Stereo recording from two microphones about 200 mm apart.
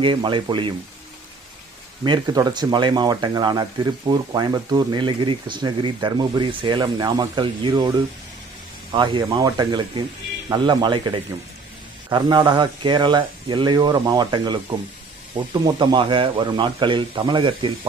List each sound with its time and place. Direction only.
0.0 s speech: 25° right (ahead or behind)
2.0 s speech: 20° right (ahead or behind)